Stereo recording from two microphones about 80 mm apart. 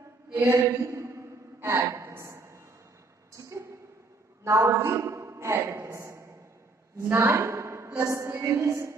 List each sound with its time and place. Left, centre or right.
0.3 s a sound: right
4.5 s a man's voice: right
8.0 s music: right